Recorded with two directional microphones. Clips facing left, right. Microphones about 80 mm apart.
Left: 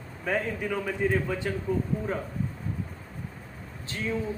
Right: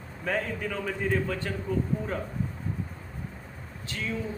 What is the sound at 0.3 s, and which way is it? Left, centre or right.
A man's voice, centre.